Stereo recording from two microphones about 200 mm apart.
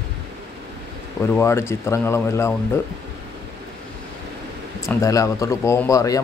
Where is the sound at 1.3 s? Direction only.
15° left (ahead or behind).